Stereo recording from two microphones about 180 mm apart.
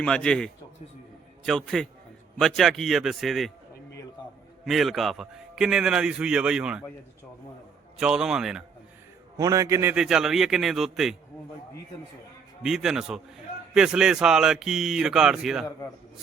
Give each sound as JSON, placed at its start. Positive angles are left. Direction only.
{"t": 0.0, "sound": "a man's voice", "side_deg": 5}
{"t": 4.2, "sound": "a sound", "side_deg": 25}
{"t": 4.6, "sound": "a man's voice", "side_deg": 0}
{"t": 7.9, "sound": "a man's voice", "side_deg": -5}
{"t": 9.4, "sound": "a man's voice", "side_deg": -20}
{"t": 9.9, "sound": "a man's voice", "side_deg": -5}
{"t": 12.6, "sound": "a man's voice", "side_deg": 0}